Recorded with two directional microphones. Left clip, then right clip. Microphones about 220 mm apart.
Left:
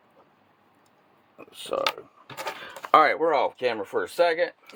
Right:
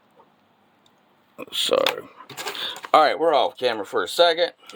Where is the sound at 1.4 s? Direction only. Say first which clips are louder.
Right 10 dB; 55° right (ahead or behind).